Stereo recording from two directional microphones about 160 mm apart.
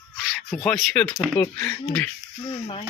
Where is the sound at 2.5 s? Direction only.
30° left (ahead or behind).